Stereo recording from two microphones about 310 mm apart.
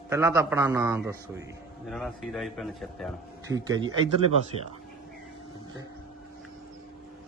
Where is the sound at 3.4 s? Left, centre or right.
Centre.